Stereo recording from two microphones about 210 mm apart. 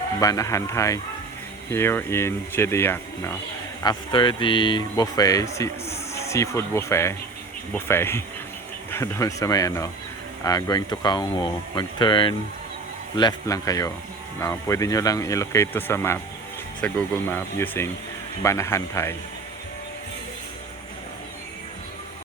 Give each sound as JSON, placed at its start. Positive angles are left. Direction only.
{"t": 0.2, "sound": "speech", "side_deg": 15}
{"t": 3.8, "sound": "speech", "side_deg": 20}